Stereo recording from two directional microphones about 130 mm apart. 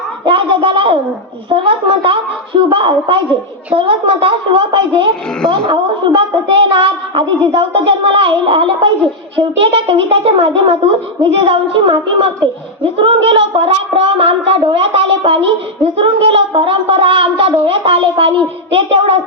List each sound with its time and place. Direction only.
0.3 s a woman's voice: 40° right (ahead or behind)